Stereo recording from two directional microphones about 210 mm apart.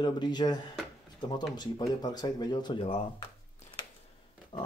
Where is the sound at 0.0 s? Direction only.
20° left (ahead or behind).